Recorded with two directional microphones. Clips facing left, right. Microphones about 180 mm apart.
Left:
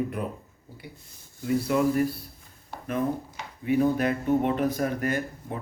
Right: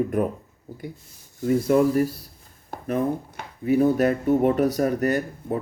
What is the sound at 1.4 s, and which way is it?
Speech, 45° right (ahead or behind).